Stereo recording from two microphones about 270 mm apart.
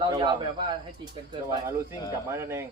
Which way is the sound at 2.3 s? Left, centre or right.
Centre.